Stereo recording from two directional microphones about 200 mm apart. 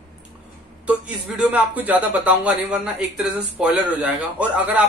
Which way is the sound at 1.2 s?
5° right (ahead or behind).